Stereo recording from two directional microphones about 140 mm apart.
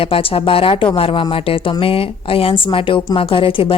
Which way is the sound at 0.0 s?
40° left (ahead or behind).